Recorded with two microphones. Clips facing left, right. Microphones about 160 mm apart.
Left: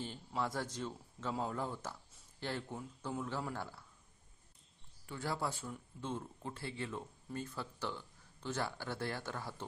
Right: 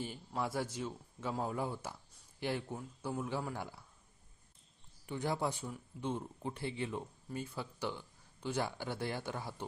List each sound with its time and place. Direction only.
0.0 s speech: 10° right (ahead or behind)
5.0 s speech: 20° right (ahead or behind)